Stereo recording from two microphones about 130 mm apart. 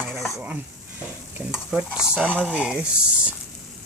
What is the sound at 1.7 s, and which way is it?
Stir, 5° right (ahead or behind).